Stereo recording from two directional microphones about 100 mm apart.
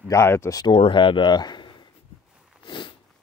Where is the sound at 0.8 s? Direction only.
55° left (ahead or behind).